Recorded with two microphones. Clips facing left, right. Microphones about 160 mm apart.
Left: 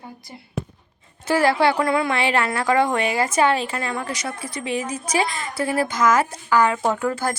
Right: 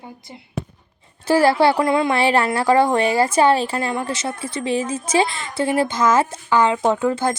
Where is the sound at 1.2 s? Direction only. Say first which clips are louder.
Right 3 dB; 30° right (ahead or behind).